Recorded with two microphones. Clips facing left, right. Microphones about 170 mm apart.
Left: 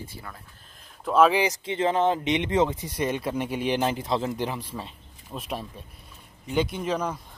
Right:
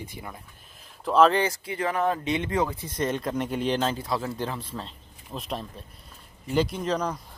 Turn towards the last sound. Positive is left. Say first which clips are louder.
# even
turn(degrees=5)  # may be behind; listen again after turning